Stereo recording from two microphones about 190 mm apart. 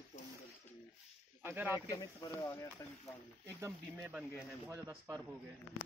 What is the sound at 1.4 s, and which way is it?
Speech, 10° right (ahead or behind).